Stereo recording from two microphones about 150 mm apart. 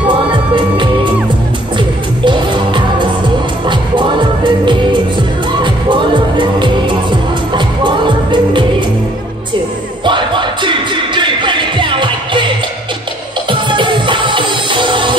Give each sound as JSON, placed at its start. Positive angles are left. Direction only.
{"t": 0.1, "sound": "music", "side_deg": -30}
{"t": 2.2, "sound": "music", "side_deg": -30}
{"t": 10.0, "sound": "music", "side_deg": -30}